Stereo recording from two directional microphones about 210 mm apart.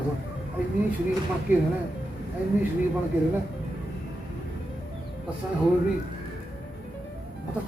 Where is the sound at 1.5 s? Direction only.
10° right (ahead or behind).